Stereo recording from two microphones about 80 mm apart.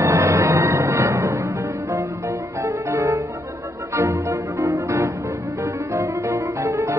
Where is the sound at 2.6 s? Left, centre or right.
Right.